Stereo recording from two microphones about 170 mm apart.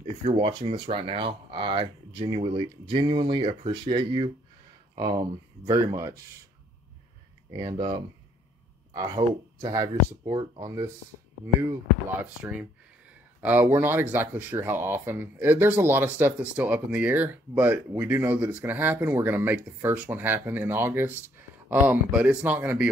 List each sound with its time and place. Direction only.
0.2 s speech: 30° right (ahead or behind)
7.5 s speech: 25° right (ahead or behind)
13.4 s speech: 10° right (ahead or behind)